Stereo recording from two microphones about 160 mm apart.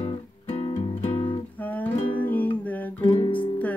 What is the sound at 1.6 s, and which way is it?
Music, 10° left (ahead or behind).